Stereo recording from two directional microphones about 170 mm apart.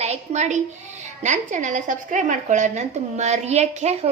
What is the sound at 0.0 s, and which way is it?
A woman's voice, 40° right (ahead or behind).